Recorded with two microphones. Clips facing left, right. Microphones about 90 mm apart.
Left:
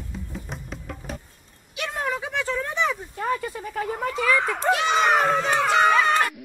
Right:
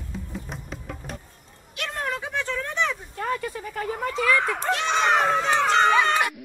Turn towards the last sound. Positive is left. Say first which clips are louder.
# left 1 dB
turn(degrees=0)  # may be behind; listen again after turning